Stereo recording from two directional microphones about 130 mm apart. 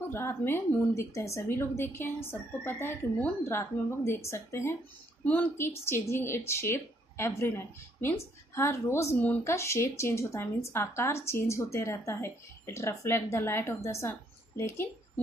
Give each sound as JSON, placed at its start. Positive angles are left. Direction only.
{"t": 0.1, "sound": "speech", "side_deg": 20}